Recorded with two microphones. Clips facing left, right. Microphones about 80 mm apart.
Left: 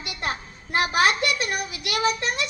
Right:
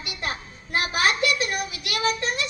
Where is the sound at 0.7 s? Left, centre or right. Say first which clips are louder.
Left 3 dB; left.